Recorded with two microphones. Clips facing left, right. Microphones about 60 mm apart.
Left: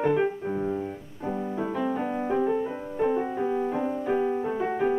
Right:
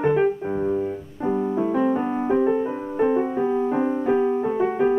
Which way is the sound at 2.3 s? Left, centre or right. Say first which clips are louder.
Right 5 dB; right.